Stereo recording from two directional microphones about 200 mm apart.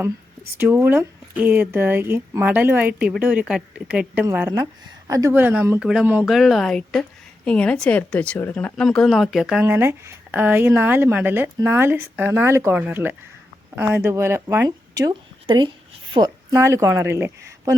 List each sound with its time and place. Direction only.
0.6 s a woman's voice: 10° right (ahead or behind)